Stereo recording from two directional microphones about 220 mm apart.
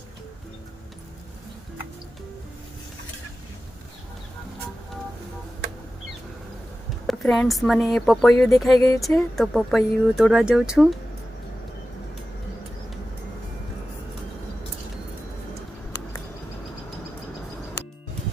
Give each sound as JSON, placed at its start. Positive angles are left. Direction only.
{"t": 7.1, "sound": "speech", "side_deg": 0}